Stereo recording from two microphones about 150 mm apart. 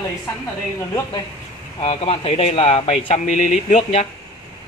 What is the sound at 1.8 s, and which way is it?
Speech, 40° left (ahead or behind).